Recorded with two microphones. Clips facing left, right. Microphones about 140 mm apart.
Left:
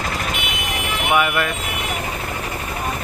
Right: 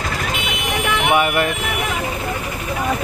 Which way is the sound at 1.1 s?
30° right (ahead or behind).